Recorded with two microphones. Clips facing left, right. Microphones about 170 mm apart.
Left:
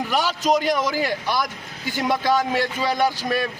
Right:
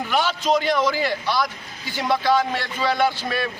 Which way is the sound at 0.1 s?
40° left (ahead or behind).